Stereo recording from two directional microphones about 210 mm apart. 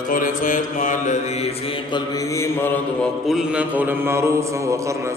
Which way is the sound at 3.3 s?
5° right (ahead or behind).